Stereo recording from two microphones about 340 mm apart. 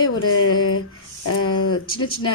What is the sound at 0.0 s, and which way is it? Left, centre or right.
A woman's voice, left.